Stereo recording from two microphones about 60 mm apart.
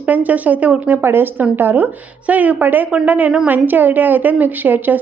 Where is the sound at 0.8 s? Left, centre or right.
Right.